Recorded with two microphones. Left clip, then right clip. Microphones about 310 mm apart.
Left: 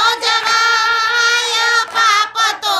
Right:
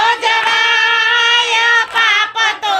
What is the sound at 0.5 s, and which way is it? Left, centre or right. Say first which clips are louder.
Music: right 1 dB; centre.